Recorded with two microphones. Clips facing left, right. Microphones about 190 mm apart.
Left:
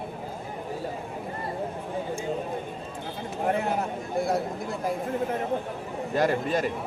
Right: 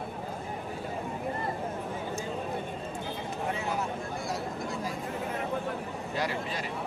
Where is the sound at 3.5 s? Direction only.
55° left (ahead or behind).